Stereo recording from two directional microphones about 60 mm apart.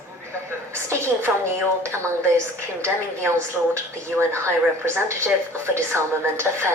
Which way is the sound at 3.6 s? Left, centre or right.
Right.